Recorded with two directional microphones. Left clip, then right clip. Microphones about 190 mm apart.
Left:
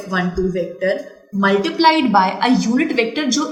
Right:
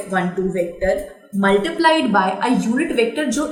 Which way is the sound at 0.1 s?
35° left (ahead or behind).